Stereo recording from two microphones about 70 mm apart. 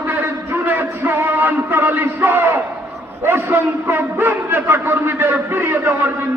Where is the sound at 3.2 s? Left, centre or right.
Right.